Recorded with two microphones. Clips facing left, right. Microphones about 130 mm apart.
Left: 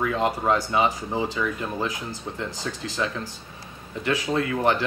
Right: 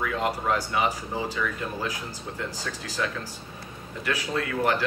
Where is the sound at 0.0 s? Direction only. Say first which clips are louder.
Left 3 dB; 25° left (ahead or behind).